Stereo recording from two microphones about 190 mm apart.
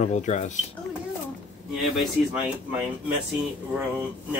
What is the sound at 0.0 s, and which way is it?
Speech, 35° left (ahead or behind).